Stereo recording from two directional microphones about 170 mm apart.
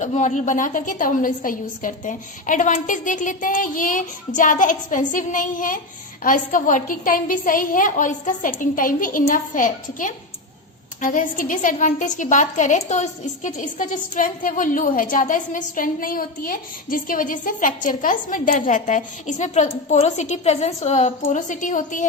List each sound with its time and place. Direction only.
0.0 s a woman's voice: 45° left (ahead or behind)